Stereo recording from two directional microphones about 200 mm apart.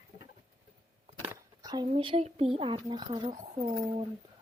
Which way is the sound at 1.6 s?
20° right (ahead or behind).